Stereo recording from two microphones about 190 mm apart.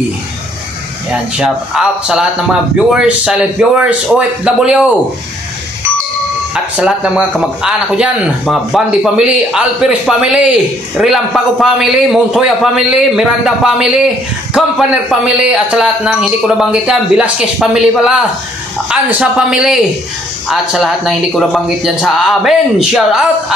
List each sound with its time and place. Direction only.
1.3 s a man's voice: 5° right (ahead or behind)
6.5 s a man's voice: 5° right (ahead or behind)